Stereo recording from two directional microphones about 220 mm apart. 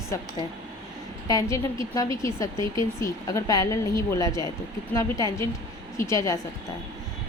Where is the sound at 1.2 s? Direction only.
15° left (ahead or behind).